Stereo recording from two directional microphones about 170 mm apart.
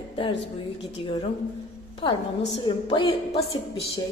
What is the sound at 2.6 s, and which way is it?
A woman's voice, 30° left (ahead or behind).